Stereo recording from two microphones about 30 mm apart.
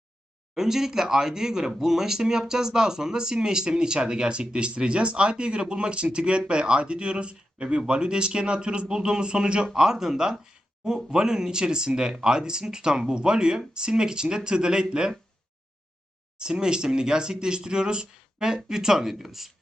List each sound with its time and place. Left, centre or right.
0.5 s speech: centre; by 8.9 s right
8.9 s speech: right
9.7 s speech: centre
16.4 s speech: right; by 19.5 s centre